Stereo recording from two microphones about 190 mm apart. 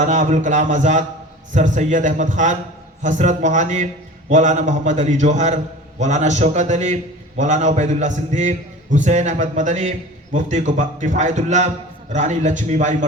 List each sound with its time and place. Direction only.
0.0 s a man's voice: 40° right (ahead or behind)